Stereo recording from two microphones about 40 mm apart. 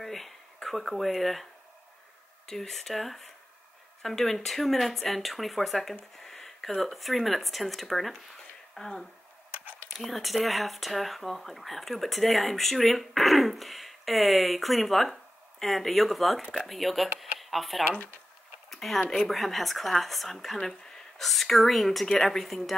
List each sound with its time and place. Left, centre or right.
0.0 s a sound: centre
0.7 s speech: centre
8.7 s speech: centre
9.9 s speech: centre
17.9 s speech: left
18.7 s a sound: centre
18.9 s speech: centre
19.2 s speech: centre